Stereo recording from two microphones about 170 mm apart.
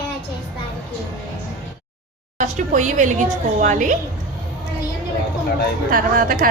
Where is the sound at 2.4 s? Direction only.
45° right (ahead or behind).